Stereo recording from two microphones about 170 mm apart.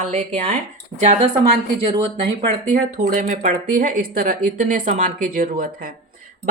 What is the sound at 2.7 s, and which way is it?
Speech, 50° right (ahead or behind).